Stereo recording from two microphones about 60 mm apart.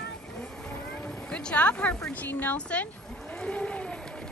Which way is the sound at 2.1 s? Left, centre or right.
Left.